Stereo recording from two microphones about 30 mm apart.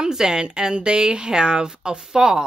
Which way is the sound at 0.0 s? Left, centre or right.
Right.